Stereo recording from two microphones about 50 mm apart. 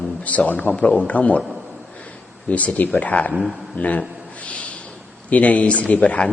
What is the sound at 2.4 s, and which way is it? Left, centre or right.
Speech, left.